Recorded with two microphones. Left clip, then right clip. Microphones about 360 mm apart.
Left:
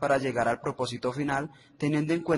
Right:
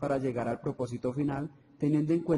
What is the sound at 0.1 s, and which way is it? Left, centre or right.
A man's voice, left.